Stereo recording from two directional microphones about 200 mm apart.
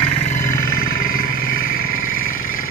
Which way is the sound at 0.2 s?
40° left (ahead or behind).